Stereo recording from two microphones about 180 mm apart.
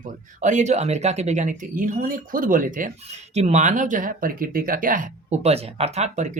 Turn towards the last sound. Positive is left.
turn(degrees=-40)  # may be behind; listen again after turning